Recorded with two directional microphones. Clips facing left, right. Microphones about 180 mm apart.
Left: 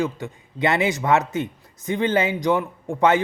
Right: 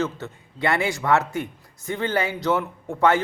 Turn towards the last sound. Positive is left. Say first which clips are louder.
# left 1 dB
turn(degrees=20)  # may be behind; listen again after turning